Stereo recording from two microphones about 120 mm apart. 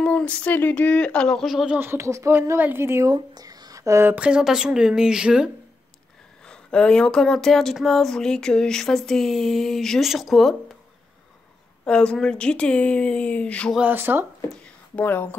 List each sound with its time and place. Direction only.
0.0 s speech: 10° left (ahead or behind)
1.8 s speech: 20° right (ahead or behind)
6.4 s speech: 10° left (ahead or behind)
11.8 s speech: 10° left (ahead or behind)
13.7 s speech: 15° right (ahead or behind)
14.6 s a sound: 15° left (ahead or behind)